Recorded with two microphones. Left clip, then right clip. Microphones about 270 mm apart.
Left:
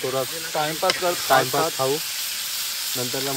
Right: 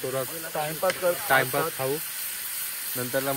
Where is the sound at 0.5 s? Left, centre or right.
Left.